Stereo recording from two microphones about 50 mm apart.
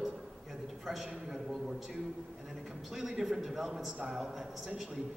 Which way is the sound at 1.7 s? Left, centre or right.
Centre.